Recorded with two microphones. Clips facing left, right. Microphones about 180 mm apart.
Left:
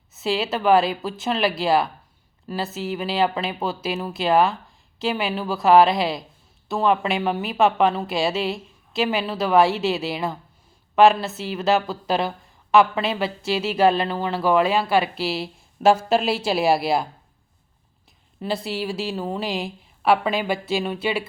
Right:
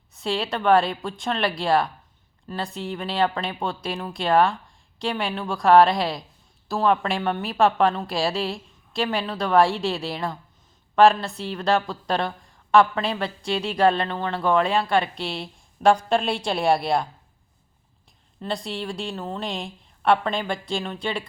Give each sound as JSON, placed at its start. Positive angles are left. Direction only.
{"t": 0.1, "sound": "a woman's voice", "side_deg": 5}
{"t": 18.3, "sound": "a woman's voice", "side_deg": 5}